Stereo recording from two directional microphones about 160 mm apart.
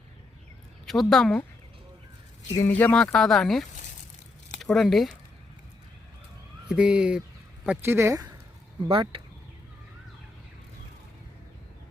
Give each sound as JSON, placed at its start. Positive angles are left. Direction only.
{"t": 0.9, "sound": "speech", "side_deg": 0}
{"t": 2.6, "sound": "speech", "side_deg": 10}
{"t": 6.7, "sound": "speech", "side_deg": -5}
{"t": 8.9, "sound": "speech", "side_deg": -35}